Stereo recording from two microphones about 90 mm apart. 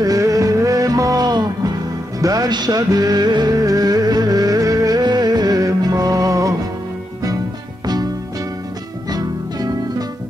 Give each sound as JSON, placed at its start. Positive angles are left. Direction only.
{"t": 0.0, "sound": "music", "side_deg": -40}
{"t": 7.8, "sound": "music", "side_deg": -50}
{"t": 9.1, "sound": "music", "side_deg": -45}